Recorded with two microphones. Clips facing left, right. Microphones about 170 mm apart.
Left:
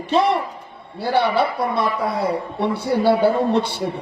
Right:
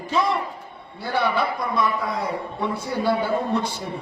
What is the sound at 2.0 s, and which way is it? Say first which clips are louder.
Speech: left 5 dB; 70° left (ahead or behind).